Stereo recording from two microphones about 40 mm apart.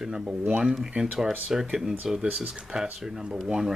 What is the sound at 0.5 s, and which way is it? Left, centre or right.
Speech, right.